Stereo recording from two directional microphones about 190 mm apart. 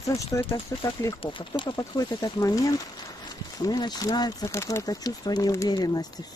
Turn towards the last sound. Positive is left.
turn(degrees=20)  # may be behind; listen again after turning